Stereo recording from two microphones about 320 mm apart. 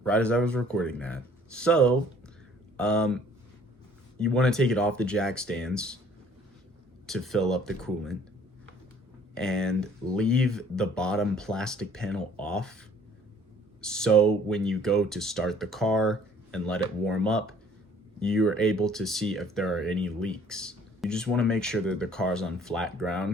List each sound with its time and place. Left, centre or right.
0.0 s speech: centre
4.2 s speech: centre
7.1 s speech: centre
9.3 s speech: centre
13.8 s speech: centre